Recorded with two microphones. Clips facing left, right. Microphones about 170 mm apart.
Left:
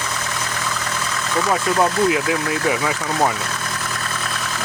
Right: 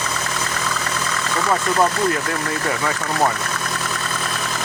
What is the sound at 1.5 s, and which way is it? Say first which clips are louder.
Speech: even; 10° left (ahead or behind).